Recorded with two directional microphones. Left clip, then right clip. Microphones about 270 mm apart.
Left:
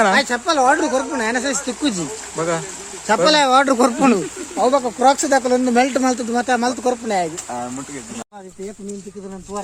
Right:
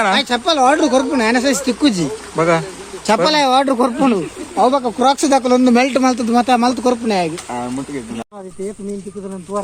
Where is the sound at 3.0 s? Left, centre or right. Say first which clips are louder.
Right 1 dB; right.